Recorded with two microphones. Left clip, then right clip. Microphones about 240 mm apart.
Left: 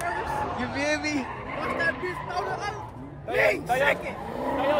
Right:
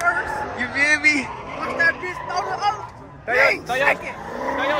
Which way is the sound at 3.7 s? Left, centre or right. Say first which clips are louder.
Right 4 dB; right.